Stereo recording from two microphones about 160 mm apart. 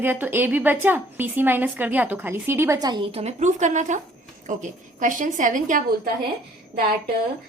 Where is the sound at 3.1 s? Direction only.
45° right (ahead or behind).